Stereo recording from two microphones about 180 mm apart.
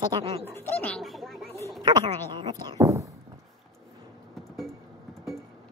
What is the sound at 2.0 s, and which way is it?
A woman's voice, 25° right (ahead or behind).